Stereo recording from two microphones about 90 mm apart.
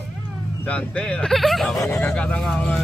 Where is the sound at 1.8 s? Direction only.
25° left (ahead or behind).